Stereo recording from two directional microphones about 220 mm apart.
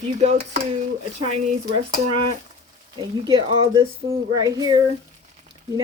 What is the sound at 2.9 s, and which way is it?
Speech, 20° right (ahead or behind).